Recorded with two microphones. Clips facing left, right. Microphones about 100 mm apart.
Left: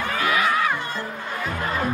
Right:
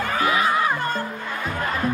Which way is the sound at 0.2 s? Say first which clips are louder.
Right 1 dB; 30° right (ahead or behind).